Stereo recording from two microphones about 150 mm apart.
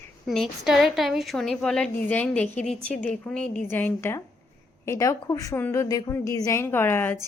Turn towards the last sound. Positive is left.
turn(degrees=15)  # may be behind; listen again after turning